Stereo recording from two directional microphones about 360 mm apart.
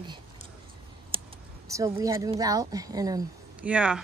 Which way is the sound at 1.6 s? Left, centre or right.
Centre.